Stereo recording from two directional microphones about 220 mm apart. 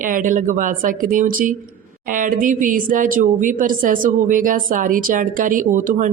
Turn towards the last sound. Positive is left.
turn(degrees=-35)  # may be behind; listen again after turning